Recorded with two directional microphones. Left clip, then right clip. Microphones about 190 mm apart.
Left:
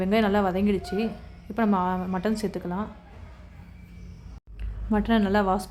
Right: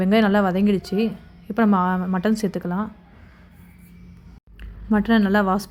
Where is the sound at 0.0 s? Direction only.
20° right (ahead or behind).